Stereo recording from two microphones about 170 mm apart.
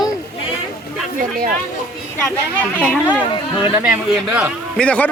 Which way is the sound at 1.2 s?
55° right (ahead or behind).